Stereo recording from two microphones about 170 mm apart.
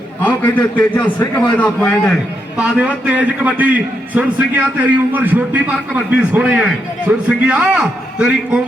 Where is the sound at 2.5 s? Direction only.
5° right (ahead or behind).